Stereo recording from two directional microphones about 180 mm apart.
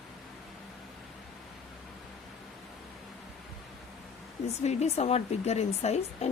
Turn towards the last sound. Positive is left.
turn(degrees=35)  # may be behind; listen again after turning